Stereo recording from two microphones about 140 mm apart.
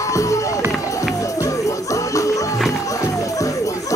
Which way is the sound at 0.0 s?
20° left (ahead or behind).